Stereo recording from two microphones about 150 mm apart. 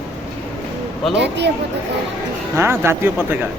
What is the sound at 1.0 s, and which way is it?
Speech, centre (ahead or behind).